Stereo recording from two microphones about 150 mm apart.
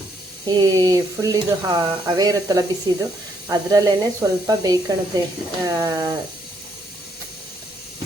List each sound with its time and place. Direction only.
0.4 s speech: 25° right (ahead or behind)